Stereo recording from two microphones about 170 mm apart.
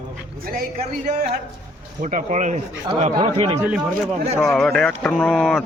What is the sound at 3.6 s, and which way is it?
Speech, 5° right (ahead or behind).